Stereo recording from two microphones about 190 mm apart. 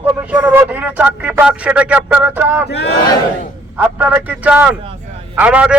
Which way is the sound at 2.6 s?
60° left (ahead or behind).